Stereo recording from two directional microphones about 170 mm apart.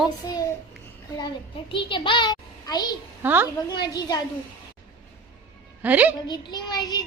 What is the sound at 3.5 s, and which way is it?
Speech, 25° left (ahead or behind).